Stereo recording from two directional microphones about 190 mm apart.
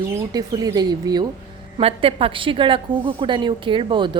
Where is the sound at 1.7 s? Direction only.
30° right (ahead or behind).